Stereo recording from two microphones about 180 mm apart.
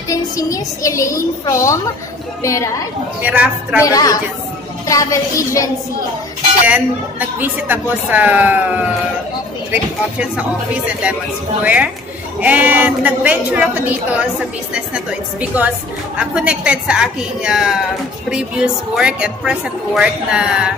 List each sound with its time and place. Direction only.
0.1 s a woman's voice: 20° left (ahead or behind)
3.2 s a woman's voice: 10° right (ahead or behind)
3.8 s a woman's voice: 20° left (ahead or behind)
6.7 s a woman's voice: 10° right (ahead or behind)
9.7 s a woman's voice: 5° right (ahead or behind)
11.6 s a woman's voice: 10° right (ahead or behind)